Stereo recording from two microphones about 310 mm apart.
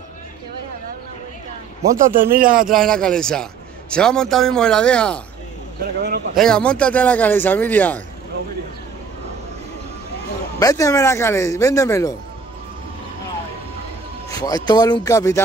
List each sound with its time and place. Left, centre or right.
1.8 s a man's voice: right
2.7 s speech: centre
5.9 s a man's voice: right
6.3 s speech: centre
10.6 s speech: centre
14.3 s speech: centre